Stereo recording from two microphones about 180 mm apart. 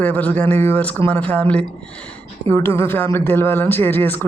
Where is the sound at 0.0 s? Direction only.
10° left (ahead or behind).